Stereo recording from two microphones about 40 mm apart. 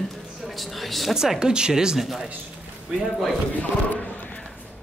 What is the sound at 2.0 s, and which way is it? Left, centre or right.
Speech, centre.